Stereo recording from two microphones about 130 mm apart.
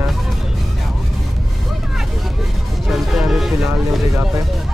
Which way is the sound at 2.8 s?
Centre (ahead or behind).